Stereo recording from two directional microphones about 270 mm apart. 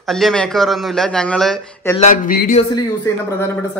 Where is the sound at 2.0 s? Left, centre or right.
Left.